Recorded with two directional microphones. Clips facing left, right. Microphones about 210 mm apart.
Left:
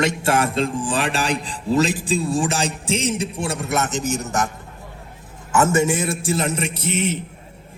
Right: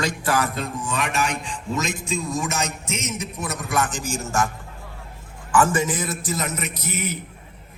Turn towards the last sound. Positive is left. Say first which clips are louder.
# left 6 dB
turn(degrees=30)  # may be behind; listen again after turning